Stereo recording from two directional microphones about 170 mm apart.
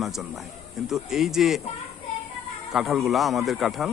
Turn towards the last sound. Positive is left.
turn(degrees=0)  # may be behind; listen again after turning